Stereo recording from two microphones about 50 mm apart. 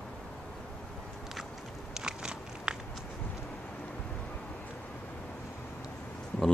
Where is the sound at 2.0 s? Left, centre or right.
Centre.